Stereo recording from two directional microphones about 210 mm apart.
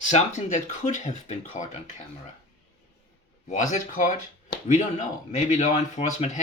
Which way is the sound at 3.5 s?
35° left (ahead or behind).